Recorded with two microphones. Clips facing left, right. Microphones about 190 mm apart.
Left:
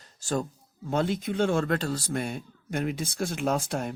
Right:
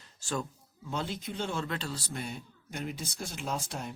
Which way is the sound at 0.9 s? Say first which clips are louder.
Left 9 dB; 55° left (ahead or behind).